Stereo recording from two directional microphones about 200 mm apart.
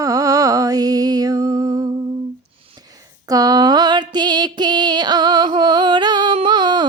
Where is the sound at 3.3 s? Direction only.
20° right (ahead or behind).